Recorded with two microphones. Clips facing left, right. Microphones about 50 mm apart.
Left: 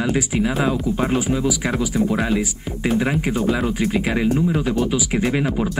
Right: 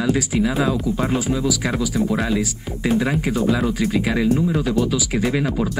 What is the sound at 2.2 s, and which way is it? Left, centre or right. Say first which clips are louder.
Speech: even; left.